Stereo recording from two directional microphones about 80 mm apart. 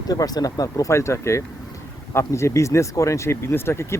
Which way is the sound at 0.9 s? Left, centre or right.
Left.